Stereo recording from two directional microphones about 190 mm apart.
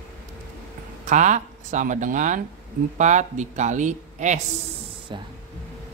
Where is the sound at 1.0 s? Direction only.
40° right (ahead or behind).